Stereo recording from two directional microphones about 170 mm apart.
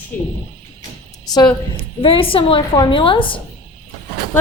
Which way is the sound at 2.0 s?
30° left (ahead or behind).